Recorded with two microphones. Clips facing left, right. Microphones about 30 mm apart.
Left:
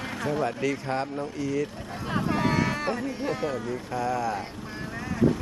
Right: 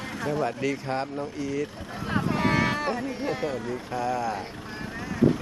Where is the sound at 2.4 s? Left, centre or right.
Centre.